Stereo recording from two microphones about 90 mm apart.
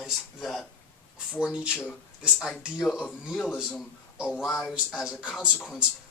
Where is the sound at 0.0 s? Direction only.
Centre (ahead or behind).